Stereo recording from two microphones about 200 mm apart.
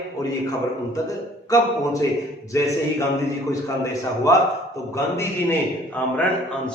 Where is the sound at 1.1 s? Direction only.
15° left (ahead or behind).